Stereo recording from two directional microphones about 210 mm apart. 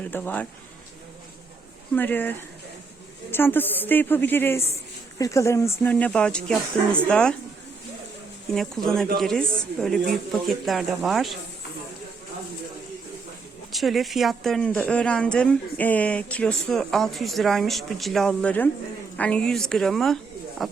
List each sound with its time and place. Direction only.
0.0 s speech: 10° left (ahead or behind)
2.0 s speech: 10° left (ahead or behind)
3.3 s speech: 10° left (ahead or behind)
8.5 s speech: centre (ahead or behind)
13.7 s speech: centre (ahead or behind)